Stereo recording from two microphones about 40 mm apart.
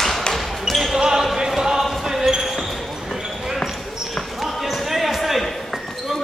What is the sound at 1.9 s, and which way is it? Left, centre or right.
Basketball bounce, centre.